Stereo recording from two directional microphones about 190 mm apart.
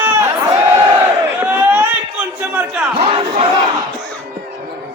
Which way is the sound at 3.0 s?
30° right (ahead or behind).